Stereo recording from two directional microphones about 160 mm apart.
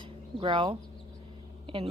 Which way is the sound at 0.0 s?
30° right (ahead or behind).